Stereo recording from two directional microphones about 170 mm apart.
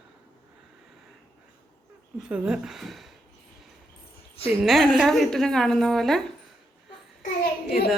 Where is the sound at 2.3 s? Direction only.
5° right (ahead or behind).